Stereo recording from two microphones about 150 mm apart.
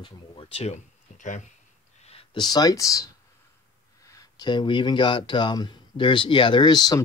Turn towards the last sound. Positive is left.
turn(degrees=25)  # may be behind; listen again after turning